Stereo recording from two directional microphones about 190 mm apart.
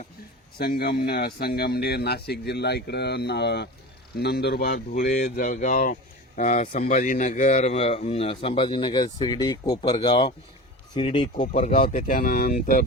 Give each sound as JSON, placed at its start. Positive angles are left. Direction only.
{"t": 0.6, "sound": "speech", "side_deg": 55}
{"t": 11.3, "sound": "speech", "side_deg": 45}